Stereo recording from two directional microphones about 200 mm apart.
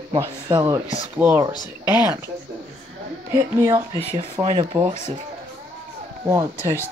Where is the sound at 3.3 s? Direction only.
15° right (ahead or behind).